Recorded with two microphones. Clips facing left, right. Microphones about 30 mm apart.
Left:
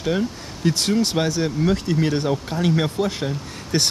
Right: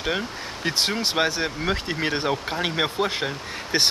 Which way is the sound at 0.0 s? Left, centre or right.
Right.